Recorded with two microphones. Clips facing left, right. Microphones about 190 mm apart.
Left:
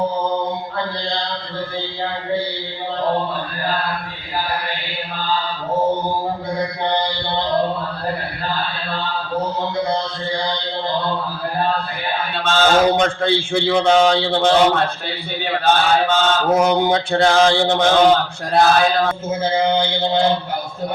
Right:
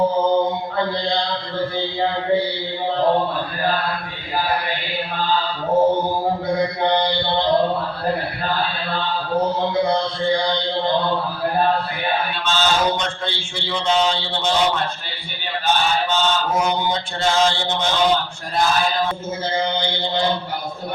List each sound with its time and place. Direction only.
12.4 s mantra: 55° left (ahead or behind)
18.5 s mantra: 65° left (ahead or behind)
19.6 s mantra: 50° left (ahead or behind)